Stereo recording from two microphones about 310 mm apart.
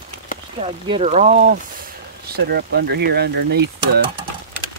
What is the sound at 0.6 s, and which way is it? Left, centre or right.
Speech, centre.